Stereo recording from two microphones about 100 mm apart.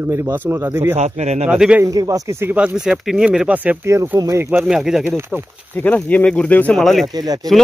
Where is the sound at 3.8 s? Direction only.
25° right (ahead or behind).